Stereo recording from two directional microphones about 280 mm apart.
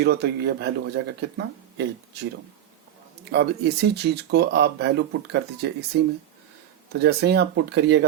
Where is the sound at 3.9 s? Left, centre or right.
Right.